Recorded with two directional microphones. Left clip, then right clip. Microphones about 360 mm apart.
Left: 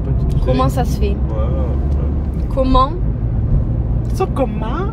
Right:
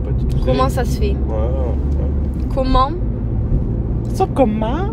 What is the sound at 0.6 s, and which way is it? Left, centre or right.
Speech, centre.